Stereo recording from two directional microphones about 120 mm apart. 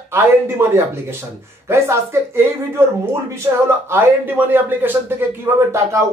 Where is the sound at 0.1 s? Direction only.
20° right (ahead or behind).